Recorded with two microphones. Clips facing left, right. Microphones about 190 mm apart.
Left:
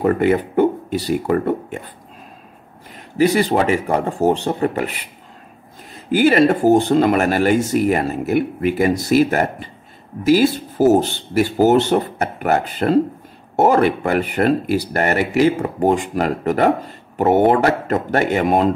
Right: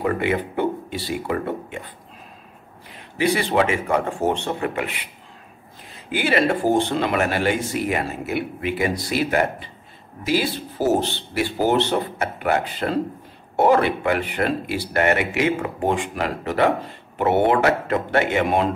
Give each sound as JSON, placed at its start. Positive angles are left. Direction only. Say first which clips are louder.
{"t": 0.0, "sound": "speech", "louder": "left 6 dB", "side_deg": 45}
{"t": 2.9, "sound": "speech", "louder": "left 5 dB", "side_deg": 40}
{"t": 6.1, "sound": "speech", "louder": "left 7 dB", "side_deg": 45}